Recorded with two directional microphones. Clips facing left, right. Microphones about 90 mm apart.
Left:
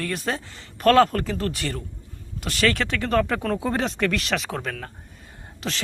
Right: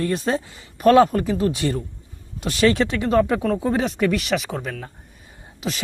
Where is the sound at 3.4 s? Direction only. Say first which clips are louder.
Right 3 dB; 5° right (ahead or behind).